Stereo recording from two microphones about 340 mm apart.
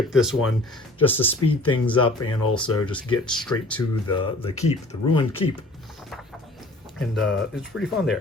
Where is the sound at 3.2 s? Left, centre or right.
Centre.